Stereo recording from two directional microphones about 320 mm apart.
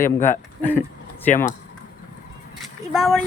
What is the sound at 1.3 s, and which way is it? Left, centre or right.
Speech, left.